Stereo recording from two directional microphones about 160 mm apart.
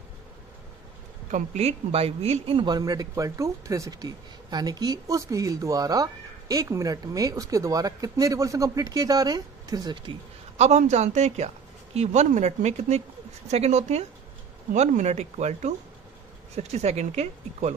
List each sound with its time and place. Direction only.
1.3 s speech: 40° right (ahead or behind); by 10.1 s 25° right (ahead or behind)
10.6 s a woman's voice: 45° right (ahead or behind)